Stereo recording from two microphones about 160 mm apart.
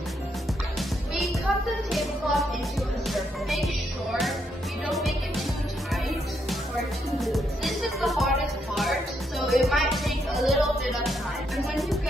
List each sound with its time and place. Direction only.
0.7 s music: centre (ahead or behind)
7.2 s music: centre (ahead or behind)
9.5 s music: centre (ahead or behind)